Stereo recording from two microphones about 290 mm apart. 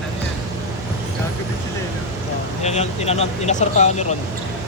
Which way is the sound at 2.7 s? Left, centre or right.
Left.